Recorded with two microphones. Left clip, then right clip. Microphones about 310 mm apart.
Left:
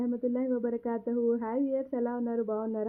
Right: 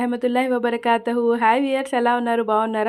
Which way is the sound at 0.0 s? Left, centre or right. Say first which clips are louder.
Right 11 dB; centre.